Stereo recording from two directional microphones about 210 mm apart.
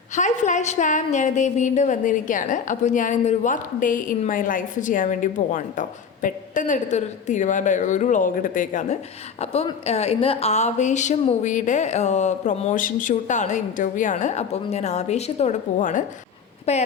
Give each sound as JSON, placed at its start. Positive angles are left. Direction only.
{"t": 0.2, "sound": "a woman's voice", "side_deg": 35}